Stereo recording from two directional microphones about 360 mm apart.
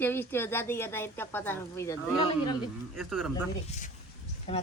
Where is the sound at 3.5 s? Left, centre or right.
Left.